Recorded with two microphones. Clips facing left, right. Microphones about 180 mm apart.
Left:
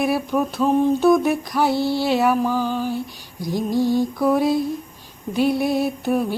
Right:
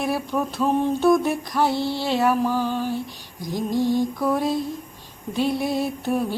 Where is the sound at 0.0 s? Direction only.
5° left (ahead or behind).